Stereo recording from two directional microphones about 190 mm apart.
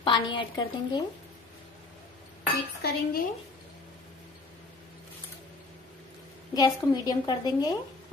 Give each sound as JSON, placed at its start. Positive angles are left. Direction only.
{"t": 0.0, "sound": "a woman's voice", "side_deg": 25}
{"t": 2.8, "sound": "dishes", "side_deg": 55}
{"t": 6.5, "sound": "a woman's voice", "side_deg": 20}